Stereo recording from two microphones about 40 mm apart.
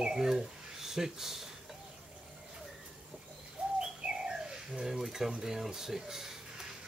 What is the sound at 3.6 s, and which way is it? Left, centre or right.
Bird, right.